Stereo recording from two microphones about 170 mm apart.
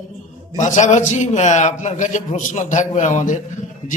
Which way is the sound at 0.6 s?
45° left (ahead or behind).